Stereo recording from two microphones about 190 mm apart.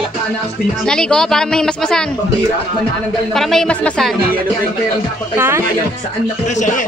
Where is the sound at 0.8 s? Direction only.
5° left (ahead or behind).